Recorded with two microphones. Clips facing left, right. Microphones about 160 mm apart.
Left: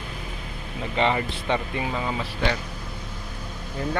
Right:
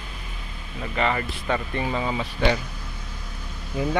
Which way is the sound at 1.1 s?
20° left (ahead or behind).